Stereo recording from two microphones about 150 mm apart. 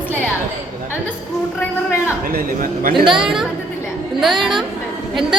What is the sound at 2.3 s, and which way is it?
Speech, 70° right (ahead or behind).